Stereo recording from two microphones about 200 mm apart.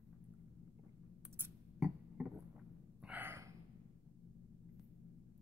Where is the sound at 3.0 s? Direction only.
10° right (ahead or behind).